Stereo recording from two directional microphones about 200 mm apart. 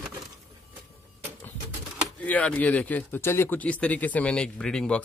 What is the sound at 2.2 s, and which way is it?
Speech, 5° left (ahead or behind).